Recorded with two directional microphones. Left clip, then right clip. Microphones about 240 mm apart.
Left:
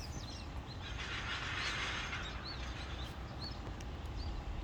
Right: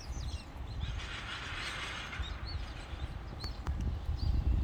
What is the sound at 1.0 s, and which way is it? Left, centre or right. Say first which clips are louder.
Vehicle: left 1 dB; right.